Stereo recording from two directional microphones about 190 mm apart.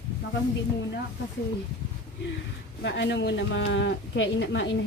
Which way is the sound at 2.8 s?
65° left (ahead or behind).